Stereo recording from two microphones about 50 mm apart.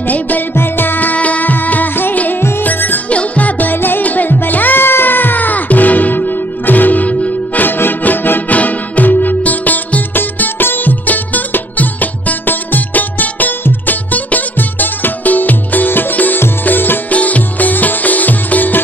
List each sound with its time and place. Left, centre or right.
0.0 s music: left
3.1 s music: left
7.6 s music: left
17.1 s music: left